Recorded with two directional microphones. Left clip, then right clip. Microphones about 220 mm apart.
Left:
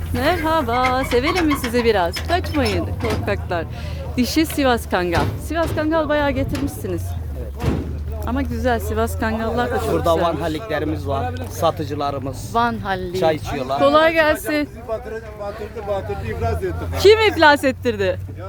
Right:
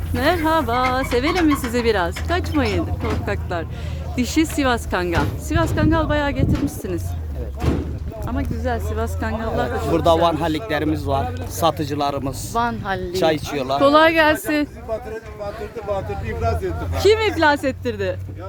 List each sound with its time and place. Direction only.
0.2 s a man's voice: centre (ahead or behind)
1.4 s speech: 45° left (ahead or behind)
1.7 s a man's voice: centre (ahead or behind)
3.2 s speech: 10° left (ahead or behind)
6.7 s speech: 10° left (ahead or behind)
8.3 s speech: 40° left (ahead or behind)
9.2 s speech: 30° left (ahead or behind)
9.9 s speech: 45° right (ahead or behind)
12.8 s a man's voice: centre (ahead or behind)
13.1 s speech: 45° right (ahead or behind)
13.7 s speech: 15° right (ahead or behind)
14.3 s a man's voice: centre (ahead or behind)
15.9 s a man's voice: centre (ahead or behind)
17.0 s speech: 25° left (ahead or behind)